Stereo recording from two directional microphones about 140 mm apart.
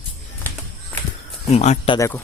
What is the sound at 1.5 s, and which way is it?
Speech, 55° left (ahead or behind).